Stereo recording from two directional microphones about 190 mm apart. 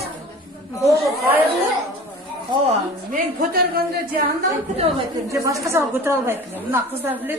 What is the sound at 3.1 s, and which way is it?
Speech, 55° right (ahead or behind).